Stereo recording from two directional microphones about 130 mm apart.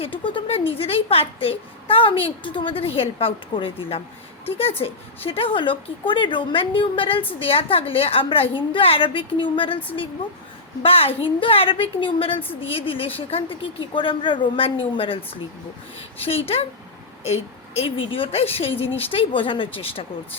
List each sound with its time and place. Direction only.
0.0 s a woman's voice: 40° left (ahead or behind)
10.8 s a woman's voice: 45° left (ahead or behind)